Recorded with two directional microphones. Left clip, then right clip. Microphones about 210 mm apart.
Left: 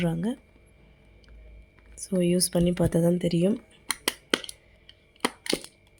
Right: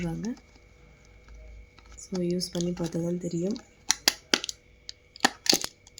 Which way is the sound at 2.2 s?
45° left (ahead or behind).